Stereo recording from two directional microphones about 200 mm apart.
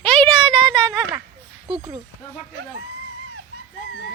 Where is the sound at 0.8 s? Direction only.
15° right (ahead or behind).